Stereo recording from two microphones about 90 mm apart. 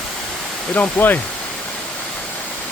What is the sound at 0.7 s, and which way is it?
Speech, 20° left (ahead or behind).